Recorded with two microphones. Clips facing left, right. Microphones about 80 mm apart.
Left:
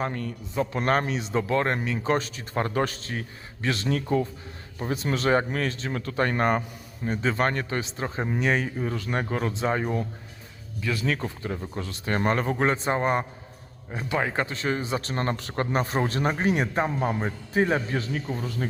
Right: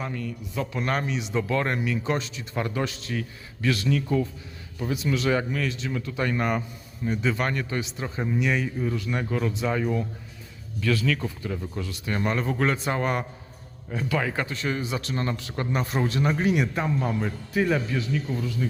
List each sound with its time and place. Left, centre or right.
0.0 s speech: left
0.5 s speech: left
0.8 s speech: left
10.8 s speech: centre
11.0 s speech: left